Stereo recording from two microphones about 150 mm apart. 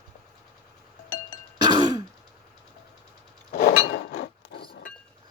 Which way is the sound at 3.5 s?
90° left.